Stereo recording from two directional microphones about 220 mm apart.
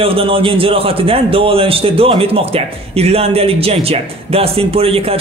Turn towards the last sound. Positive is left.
turn(degrees=-25)  # may be behind; listen again after turning